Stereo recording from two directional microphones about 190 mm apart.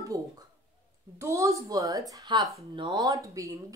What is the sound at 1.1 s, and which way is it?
A woman's voice, 15° right (ahead or behind).